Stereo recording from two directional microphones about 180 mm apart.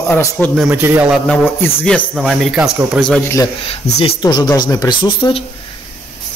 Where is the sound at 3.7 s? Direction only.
35° left (ahead or behind).